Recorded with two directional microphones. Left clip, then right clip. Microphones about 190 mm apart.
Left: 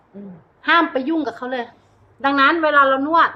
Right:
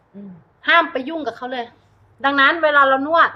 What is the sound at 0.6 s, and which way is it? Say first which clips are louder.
A woman's voice: right 1 dB; 5° left (ahead or behind).